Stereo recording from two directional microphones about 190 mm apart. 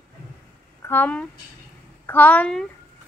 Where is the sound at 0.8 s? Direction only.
10° left (ahead or behind).